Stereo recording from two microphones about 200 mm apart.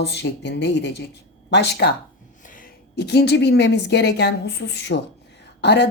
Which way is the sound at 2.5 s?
45° left (ahead or behind).